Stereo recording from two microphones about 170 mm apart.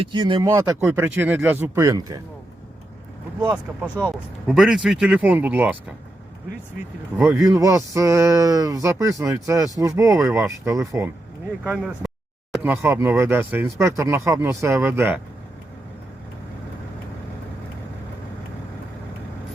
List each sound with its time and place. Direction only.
0.0 s speech: 25° right (ahead or behind)
3.8 s speech: 10° left (ahead or behind)
4.4 s speech: 5° right (ahead or behind)
7.3 s speech: 20° right (ahead or behind)
11.6 s speech: 5° left (ahead or behind)
12.6 s speech: 15° right (ahead or behind)